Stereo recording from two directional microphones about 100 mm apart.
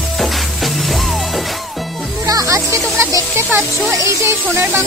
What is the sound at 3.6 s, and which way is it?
Speech, centre (ahead or behind).